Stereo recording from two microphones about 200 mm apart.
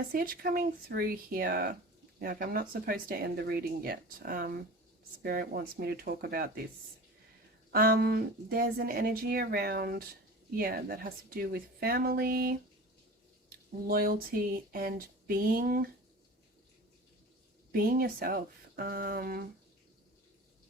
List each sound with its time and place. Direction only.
0.0 s speech: 45° right (ahead or behind)
7.7 s speech: 45° right (ahead or behind)
17.7 s speech: 50° right (ahead or behind)